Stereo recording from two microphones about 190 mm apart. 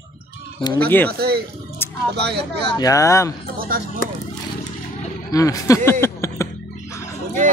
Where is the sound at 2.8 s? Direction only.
15° left (ahead or behind).